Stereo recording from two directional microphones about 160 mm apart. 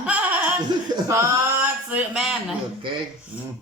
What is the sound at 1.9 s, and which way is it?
Speech, 5° right (ahead or behind).